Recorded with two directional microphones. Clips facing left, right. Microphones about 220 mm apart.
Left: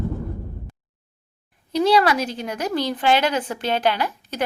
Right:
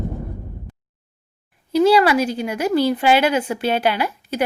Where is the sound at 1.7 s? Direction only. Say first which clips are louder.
Right 3 dB; 5° right (ahead or behind).